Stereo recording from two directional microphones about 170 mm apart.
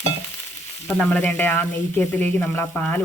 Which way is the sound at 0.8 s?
5° left (ahead or behind).